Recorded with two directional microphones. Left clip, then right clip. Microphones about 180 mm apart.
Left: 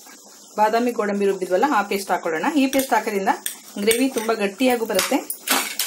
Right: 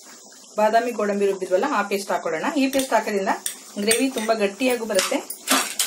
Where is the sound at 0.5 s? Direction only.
35° left (ahead or behind).